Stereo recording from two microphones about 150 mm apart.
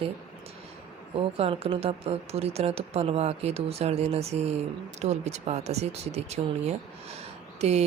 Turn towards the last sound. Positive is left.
turn(degrees=-45)  # may be behind; listen again after turning